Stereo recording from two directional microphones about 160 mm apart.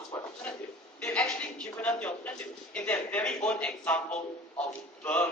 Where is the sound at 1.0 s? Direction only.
10° left (ahead or behind).